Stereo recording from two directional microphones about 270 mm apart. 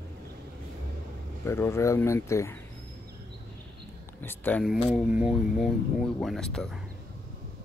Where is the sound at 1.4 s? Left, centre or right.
Centre.